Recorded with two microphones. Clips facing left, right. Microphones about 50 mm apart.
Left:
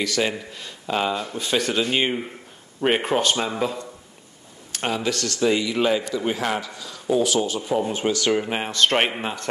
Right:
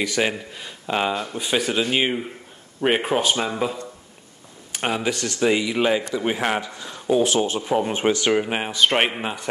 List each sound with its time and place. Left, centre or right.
0.0 s speech: centre
4.7 s a man's voice: centre